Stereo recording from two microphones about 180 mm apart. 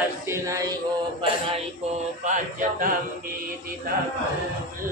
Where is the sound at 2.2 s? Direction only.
45° right (ahead or behind).